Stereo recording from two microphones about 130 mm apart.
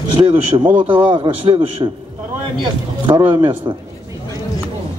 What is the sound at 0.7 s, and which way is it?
Speech, 15° right (ahead or behind).